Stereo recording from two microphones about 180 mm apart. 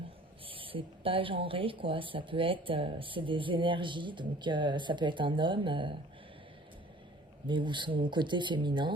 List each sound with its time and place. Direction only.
0.4 s speech: 30° right (ahead or behind)
7.4 s speech: 25° right (ahead or behind)